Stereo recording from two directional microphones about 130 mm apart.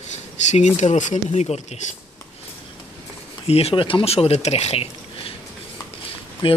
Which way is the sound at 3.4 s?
50° left (ahead or behind).